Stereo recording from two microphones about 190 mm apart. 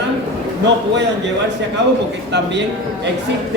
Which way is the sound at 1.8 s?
65° right (ahead or behind).